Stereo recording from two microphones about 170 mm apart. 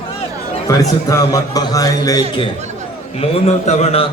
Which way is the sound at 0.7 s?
20° left (ahead or behind).